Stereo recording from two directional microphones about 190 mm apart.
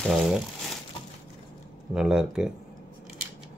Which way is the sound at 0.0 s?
Centre (ahead or behind).